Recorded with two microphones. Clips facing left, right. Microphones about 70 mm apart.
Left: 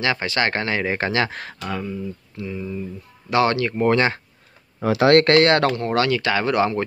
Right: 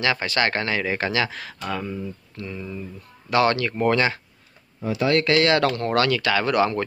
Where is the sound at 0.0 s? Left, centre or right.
Left.